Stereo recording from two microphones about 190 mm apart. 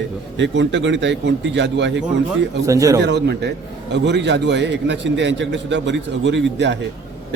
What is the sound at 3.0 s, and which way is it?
A man's voice, 65° right (ahead or behind).